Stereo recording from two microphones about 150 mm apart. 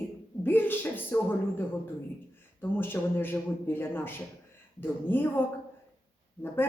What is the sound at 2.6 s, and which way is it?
Speech, 15° left (ahead or behind).